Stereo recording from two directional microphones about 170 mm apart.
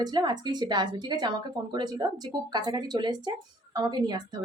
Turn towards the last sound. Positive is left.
turn(degrees=-25)  # may be behind; listen again after turning